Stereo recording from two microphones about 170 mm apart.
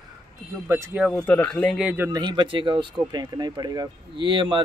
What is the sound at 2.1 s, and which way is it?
Speech, 25° right (ahead or behind).